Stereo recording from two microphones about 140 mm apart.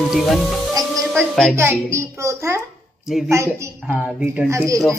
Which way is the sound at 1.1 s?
5° left (ahead or behind).